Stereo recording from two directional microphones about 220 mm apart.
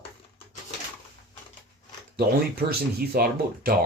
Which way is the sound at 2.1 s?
45° right (ahead or behind).